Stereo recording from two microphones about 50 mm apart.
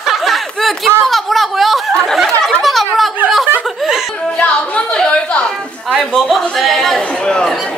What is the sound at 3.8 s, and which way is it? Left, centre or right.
Music, centre.